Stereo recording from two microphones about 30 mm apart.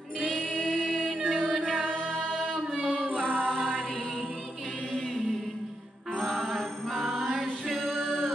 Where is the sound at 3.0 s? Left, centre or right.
Right.